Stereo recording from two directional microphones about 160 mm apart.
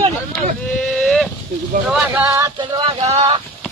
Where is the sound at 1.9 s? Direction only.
Centre (ahead or behind).